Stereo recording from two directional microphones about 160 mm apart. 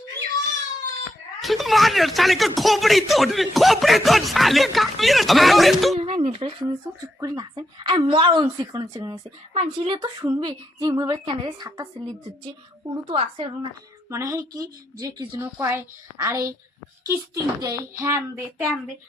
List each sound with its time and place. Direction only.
1.4 s speech: centre (ahead or behind)
6.0 s speech: 40° right (ahead or behind)
7.2 s speech: 25° right (ahead or behind)
9.6 s speech: 35° right (ahead or behind)
13.1 s speech: 35° right (ahead or behind)
14.1 s a woman's voice: 20° right (ahead or behind)